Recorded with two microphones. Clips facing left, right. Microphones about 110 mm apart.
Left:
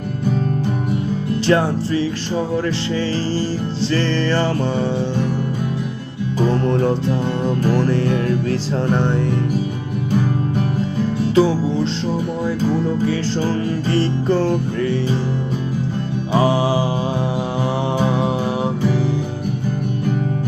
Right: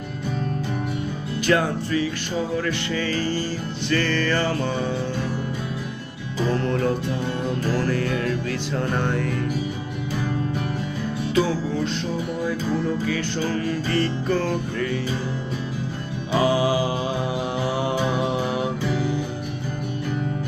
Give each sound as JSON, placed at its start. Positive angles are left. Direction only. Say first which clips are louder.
{"t": 1.5, "sound": "music", "louder": "left 4 dB", "side_deg": 30}
{"t": 6.5, "sound": "music", "louder": "left 3 dB", "side_deg": 25}
{"t": 11.3, "sound": "music", "louder": "left 6 dB", "side_deg": 25}
{"t": 13.1, "sound": "music", "louder": "left 5 dB", "side_deg": 30}
{"t": 16.3, "sound": "music", "louder": "left 3 dB", "side_deg": 30}